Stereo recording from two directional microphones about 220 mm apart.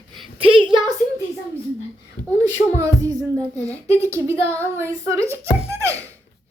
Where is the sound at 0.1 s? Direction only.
25° right (ahead or behind).